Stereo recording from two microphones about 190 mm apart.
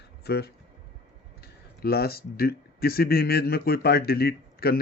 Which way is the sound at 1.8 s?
55° left (ahead or behind).